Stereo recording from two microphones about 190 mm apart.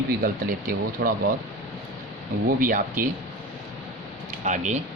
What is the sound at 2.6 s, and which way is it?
Speech, 45° right (ahead or behind).